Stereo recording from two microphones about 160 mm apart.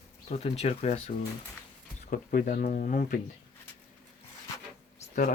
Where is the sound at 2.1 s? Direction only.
60° left (ahead or behind).